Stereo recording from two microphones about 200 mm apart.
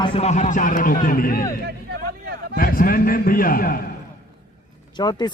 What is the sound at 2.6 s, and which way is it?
A man's voice, 45° left (ahead or behind).